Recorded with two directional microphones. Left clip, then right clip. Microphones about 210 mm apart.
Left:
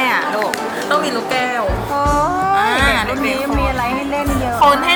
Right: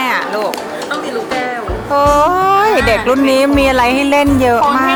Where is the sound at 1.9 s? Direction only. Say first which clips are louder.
Right 7 dB; 40° right (ahead or behind).